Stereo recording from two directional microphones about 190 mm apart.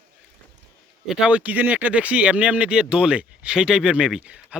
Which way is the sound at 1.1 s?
5° right (ahead or behind).